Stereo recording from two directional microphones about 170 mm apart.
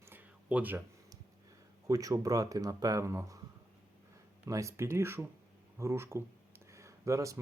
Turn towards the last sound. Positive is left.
turn(degrees=-20)  # may be behind; listen again after turning